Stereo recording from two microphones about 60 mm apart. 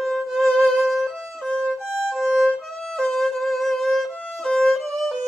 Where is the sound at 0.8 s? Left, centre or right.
Centre.